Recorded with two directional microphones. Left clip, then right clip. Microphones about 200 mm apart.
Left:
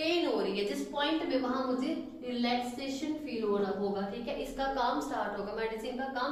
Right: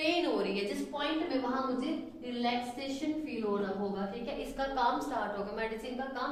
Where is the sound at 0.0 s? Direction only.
15° right (ahead or behind).